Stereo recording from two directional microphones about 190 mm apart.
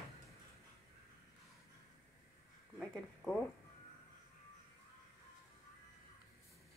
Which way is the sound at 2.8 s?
5° left (ahead or behind).